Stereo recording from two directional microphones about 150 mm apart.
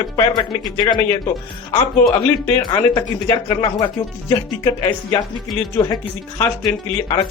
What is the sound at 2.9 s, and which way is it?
Speech, 25° left (ahead or behind).